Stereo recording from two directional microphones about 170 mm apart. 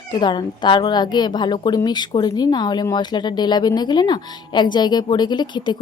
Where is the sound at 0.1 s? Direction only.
25° left (ahead or behind).